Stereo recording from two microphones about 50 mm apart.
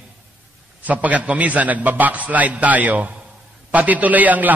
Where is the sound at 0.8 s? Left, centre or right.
Right.